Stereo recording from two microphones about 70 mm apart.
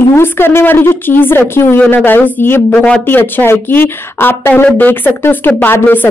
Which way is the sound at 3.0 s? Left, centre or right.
Left.